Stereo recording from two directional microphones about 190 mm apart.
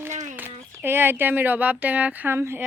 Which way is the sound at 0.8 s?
10° right (ahead or behind).